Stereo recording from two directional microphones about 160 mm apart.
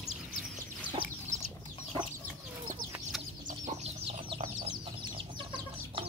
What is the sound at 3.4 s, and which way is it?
Chicken, 45° right (ahead or behind).